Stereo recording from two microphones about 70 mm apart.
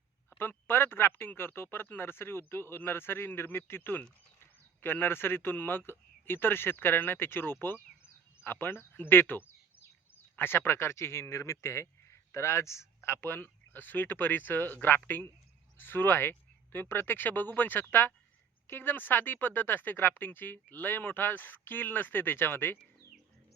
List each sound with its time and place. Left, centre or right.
0.3 s speech: left